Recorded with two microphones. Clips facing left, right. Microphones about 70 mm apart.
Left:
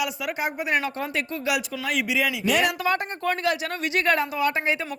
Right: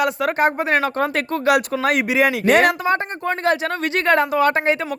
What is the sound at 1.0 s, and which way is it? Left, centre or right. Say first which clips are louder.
Speech: right 8 dB; right.